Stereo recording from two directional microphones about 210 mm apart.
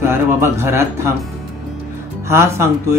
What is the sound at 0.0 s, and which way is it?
Speech, 10° right (ahead or behind).